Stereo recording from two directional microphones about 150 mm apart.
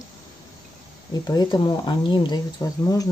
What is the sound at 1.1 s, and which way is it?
Speech, 25° left (ahead or behind).